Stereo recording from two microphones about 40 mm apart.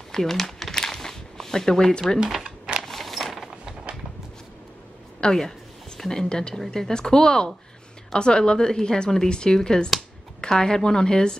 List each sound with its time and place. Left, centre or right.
0.1 s crumpling: centre
2.2 s speech: centre
2.9 s a sound: centre
5.2 s a woman's voice: centre
6.5 s a woman's voice: centre